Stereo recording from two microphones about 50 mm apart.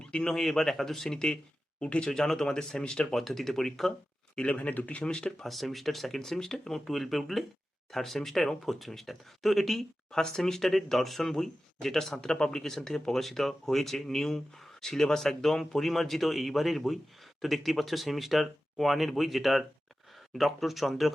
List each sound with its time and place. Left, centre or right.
0.0 s speech: centre
0.3 s speech: centre
2.0 s speech: centre
3.2 s speech: centre
4.5 s speech: left
5.4 s speech: centre